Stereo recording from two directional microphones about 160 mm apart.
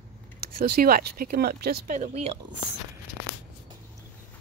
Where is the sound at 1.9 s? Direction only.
45° right (ahead or behind).